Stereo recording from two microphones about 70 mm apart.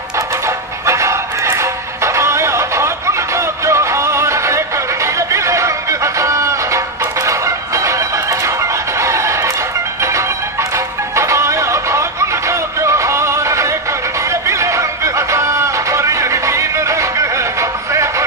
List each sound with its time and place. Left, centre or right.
0.8 s music: right
11.1 s music: right